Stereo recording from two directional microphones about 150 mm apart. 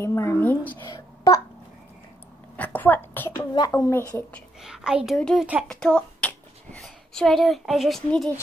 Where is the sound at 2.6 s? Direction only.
10° left (ahead or behind).